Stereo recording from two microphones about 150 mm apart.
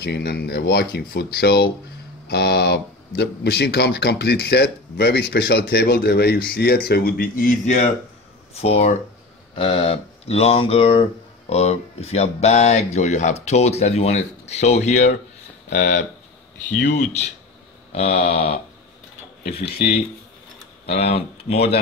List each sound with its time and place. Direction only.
0.0 s speech: 90° left; by 7.8 s 60° left (ahead or behind)
8.5 s speech: 45° left (ahead or behind)
20.8 s speech: 45° left (ahead or behind)